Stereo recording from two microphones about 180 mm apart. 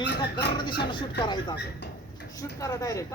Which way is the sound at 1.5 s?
70° left (ahead or behind).